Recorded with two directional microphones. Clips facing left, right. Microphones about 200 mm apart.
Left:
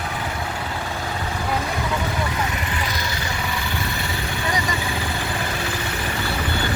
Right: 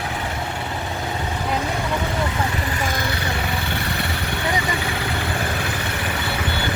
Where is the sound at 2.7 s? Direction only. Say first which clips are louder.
Right 3 dB; 50° right (ahead or behind).